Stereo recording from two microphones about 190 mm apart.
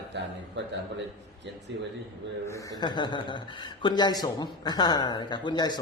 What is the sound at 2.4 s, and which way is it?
Speech, 15° left (ahead or behind).